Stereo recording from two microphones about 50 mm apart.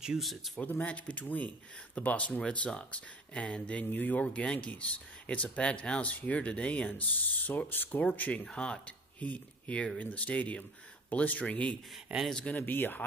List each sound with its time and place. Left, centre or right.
0.2 s speech: centre
0.6 s speech: left
8.5 s speech: centre
12.1 s speech: right
12.5 s speech: left